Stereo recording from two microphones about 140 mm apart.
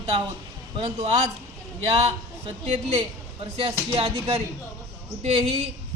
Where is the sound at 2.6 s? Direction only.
45° right (ahead or behind).